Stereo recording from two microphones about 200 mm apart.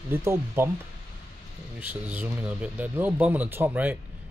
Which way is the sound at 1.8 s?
5° right (ahead or behind).